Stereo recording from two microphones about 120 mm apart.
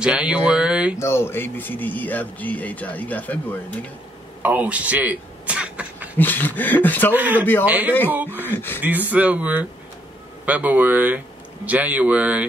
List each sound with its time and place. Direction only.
0.0 s speech: 10° right (ahead or behind)
0.9 s speech: 20° left (ahead or behind)
4.4 s a sound: 15° right (ahead or behind)
6.1 s speech: 15° left (ahead or behind)
7.2 s speech: 15° right (ahead or behind)
8.4 s speech: 15° left (ahead or behind)
9.1 s speech: 10° right (ahead or behind)